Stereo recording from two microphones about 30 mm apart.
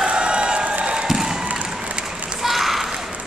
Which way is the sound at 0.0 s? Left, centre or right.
Right.